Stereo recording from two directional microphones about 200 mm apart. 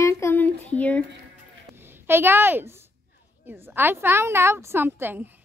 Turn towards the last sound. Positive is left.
turn(degrees=-10)  # may be behind; listen again after turning